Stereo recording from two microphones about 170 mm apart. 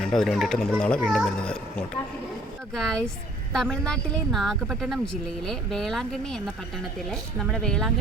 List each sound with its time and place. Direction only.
0.0 s speech: centre (ahead or behind)